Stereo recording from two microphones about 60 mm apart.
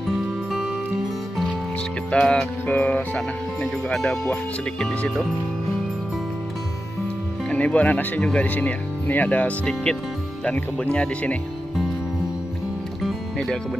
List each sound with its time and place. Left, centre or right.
2.0 s music: centre
2.6 s speech: left
7.4 s speech: left
8.2 s speech: centre
8.5 s speech: left
13.0 s music: centre